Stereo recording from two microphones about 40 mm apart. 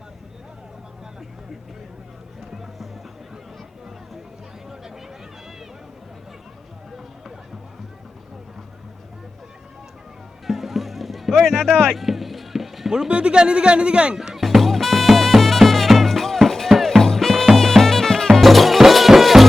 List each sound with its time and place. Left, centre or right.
10.4 s music: centre
12.9 s speech: right
14.2 s music: centre